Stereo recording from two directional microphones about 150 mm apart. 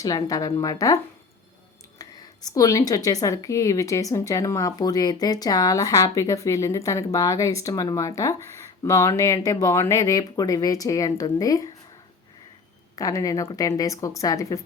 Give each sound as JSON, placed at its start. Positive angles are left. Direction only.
{"t": 0.0, "sound": "a woman's voice", "side_deg": 25}
{"t": 2.0, "sound": "a sound", "side_deg": 25}
{"t": 2.6, "sound": "a woman's voice", "side_deg": 25}
{"t": 13.0, "sound": "a woman's voice", "side_deg": 25}